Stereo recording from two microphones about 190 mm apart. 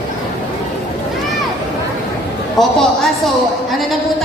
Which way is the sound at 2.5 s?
Centre (ahead or behind).